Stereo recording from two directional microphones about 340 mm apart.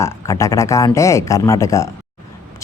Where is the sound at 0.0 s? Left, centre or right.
Centre.